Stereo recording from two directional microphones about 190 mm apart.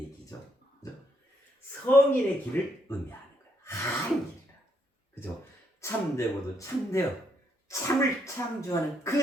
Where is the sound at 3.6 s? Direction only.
15° left (ahead or behind).